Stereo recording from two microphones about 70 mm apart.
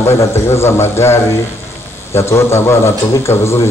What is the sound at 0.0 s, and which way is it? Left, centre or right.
Speech, left.